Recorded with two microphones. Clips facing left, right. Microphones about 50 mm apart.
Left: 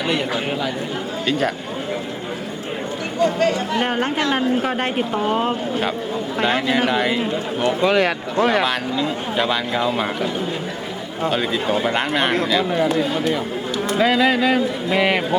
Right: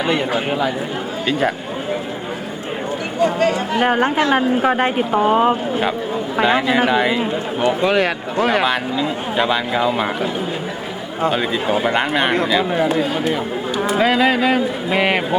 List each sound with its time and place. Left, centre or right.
0.1 s speech: centre
3.2 s speech: centre
8.6 s speech: centre
11.2 s speech: centre